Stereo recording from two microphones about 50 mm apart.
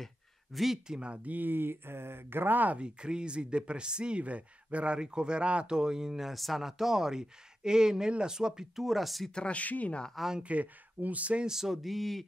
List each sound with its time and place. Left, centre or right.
0.0 s a sound: centre
0.8 s speech: centre
1.3 s speech: right
2.8 s speech: centre
9.3 s speech: left
10.1 s speech: centre
10.4 s speech: right
11.4 s a sound: centre